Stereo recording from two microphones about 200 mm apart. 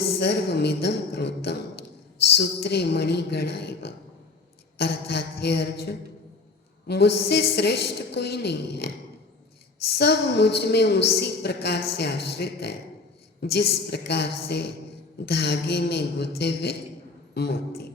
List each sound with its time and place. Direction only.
0.2 s a woman's voice: 55° left (ahead or behind)
9.9 s a woman's voice: 55° left (ahead or behind)